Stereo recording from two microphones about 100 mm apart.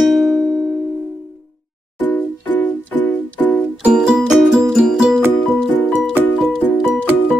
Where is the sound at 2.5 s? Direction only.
15° left (ahead or behind).